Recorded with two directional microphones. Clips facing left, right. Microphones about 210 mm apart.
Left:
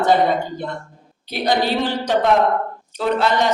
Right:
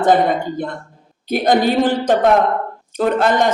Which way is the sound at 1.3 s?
50° right (ahead or behind).